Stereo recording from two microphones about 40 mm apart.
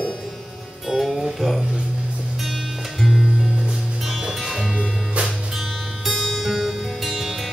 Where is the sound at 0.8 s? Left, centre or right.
Centre.